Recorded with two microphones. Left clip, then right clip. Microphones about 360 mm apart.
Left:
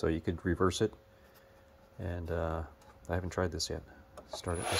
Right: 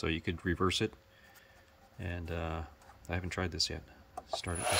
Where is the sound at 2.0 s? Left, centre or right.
Centre.